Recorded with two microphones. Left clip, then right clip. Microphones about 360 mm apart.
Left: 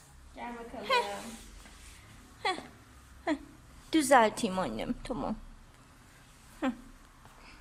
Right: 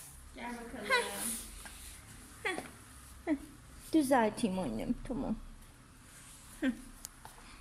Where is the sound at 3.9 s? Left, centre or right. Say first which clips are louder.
Left 5 dB; centre.